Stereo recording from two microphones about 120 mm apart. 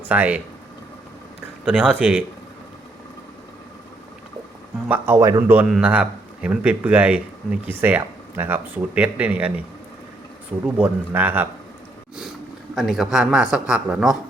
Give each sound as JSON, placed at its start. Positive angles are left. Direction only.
{"t": 0.1, "sound": "speech", "side_deg": -15}
{"t": 1.6, "sound": "a man's voice", "side_deg": -5}
{"t": 4.9, "sound": "speech", "side_deg": -20}
{"t": 5.6, "sound": "a man's voice", "side_deg": 0}
{"t": 10.8, "sound": "speech", "side_deg": -15}
{"t": 12.7, "sound": "a man's voice", "side_deg": 0}